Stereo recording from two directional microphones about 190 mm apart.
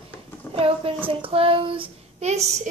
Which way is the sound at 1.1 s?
30° right (ahead or behind).